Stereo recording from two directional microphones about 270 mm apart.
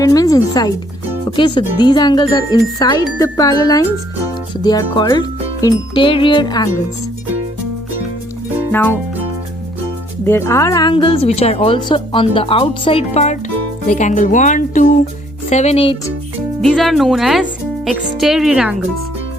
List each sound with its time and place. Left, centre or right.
0.0 s speech: centre
8.7 s music: centre
10.2 s a woman's voice: centre
16.6 s speech: centre